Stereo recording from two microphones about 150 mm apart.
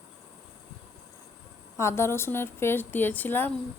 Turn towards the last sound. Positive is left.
turn(degrees=10)  # may be behind; listen again after turning